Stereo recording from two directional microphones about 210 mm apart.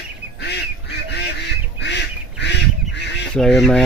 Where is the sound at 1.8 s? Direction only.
55° left (ahead or behind).